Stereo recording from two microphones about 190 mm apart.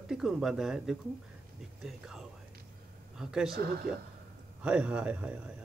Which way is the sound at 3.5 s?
55° right (ahead or behind).